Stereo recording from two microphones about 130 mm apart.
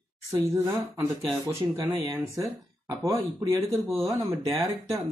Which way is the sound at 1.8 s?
30° right (ahead or behind).